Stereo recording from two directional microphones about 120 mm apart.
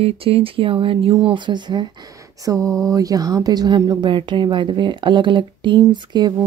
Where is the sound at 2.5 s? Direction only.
5° left (ahead or behind).